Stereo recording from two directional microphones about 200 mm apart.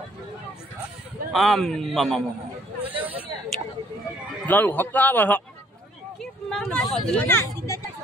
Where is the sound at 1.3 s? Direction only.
Centre (ahead or behind).